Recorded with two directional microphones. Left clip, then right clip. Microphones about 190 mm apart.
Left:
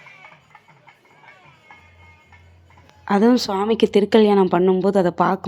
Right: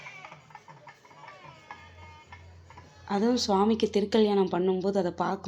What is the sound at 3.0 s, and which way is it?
Speech, 40° left (ahead or behind).